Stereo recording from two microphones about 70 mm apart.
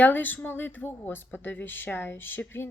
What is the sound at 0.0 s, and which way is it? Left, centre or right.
Speech, left.